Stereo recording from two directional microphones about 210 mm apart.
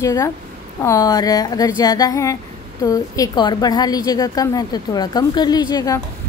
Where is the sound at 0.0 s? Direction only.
15° left (ahead or behind).